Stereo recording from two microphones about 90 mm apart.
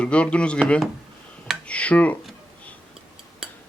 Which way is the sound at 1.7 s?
15° left (ahead or behind).